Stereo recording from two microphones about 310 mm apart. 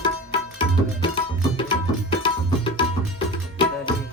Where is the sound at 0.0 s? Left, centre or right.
Centre.